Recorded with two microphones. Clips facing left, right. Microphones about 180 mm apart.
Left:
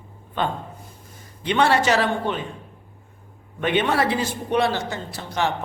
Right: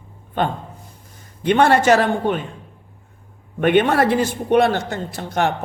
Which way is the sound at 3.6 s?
50° right (ahead or behind).